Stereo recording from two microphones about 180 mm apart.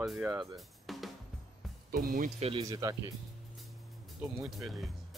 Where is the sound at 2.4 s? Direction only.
30° right (ahead or behind).